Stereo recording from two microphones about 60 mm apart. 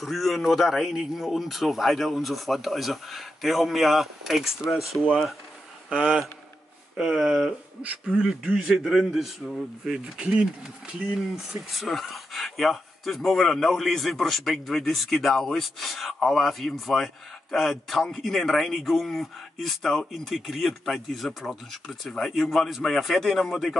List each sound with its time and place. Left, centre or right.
0.0 s speech: centre
5.9 s speech: centre
7.0 s a man's voice: centre